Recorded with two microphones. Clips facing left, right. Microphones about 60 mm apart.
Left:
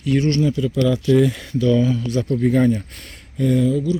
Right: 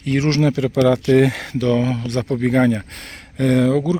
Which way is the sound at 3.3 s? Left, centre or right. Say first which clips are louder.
Right 2 dB; right.